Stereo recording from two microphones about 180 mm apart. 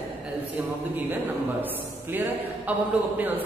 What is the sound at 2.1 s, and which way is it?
Speech, 10° right (ahead or behind).